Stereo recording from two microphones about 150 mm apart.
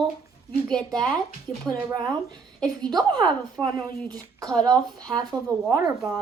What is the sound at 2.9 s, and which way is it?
A woman's voice, 30° right (ahead or behind).